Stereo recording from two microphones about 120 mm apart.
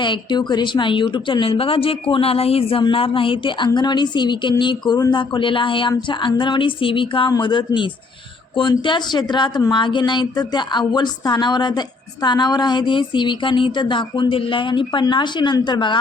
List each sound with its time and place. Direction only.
0.0 s a woman's voice: 40° left (ahead or behind)
8.9 s speech: 40° left (ahead or behind)